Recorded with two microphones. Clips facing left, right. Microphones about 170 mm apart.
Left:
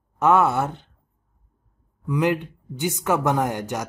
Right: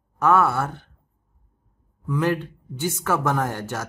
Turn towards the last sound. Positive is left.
turn(degrees=15)  # may be behind; listen again after turning